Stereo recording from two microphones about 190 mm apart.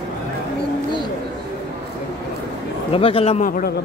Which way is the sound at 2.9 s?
30° left (ahead or behind).